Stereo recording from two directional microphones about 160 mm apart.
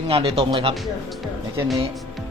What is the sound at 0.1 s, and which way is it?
Speech, 35° right (ahead or behind).